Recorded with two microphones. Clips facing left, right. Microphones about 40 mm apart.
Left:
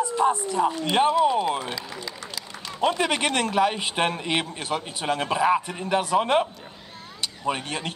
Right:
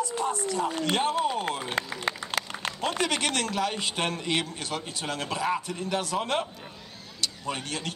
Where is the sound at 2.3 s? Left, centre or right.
Right.